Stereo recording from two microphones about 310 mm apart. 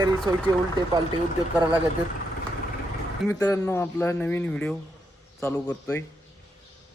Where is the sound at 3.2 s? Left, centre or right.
Centre.